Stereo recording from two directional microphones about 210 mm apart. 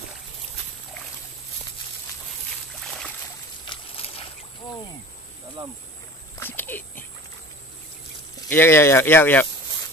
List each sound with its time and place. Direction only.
3.6 s a sound: 25° left (ahead or behind)
5.6 s speech: 20° right (ahead or behind)
6.4 s dog: 10° left (ahead or behind)
8.5 s speech: 10° left (ahead or behind)